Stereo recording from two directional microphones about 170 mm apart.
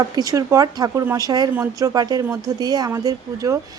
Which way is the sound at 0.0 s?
20° right (ahead or behind).